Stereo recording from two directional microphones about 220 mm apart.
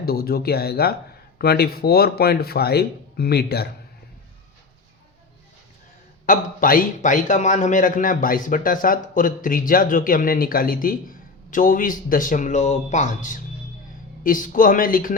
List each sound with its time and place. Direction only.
0.0 s speech: 45° left (ahead or behind)
6.2 s a man's voice: 40° left (ahead or behind)